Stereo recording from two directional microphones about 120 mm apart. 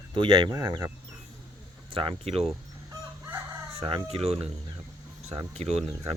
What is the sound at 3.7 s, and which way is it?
Speech, 50° right (ahead or behind).